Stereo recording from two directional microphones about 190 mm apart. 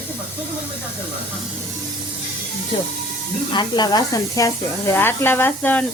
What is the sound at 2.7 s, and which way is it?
Speech, 25° left (ahead or behind).